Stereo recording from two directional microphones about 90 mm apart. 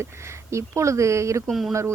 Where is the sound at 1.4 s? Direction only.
Centre (ahead or behind).